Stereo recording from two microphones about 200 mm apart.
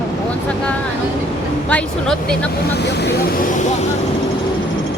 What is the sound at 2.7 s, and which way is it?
Speech, 55° left (ahead or behind).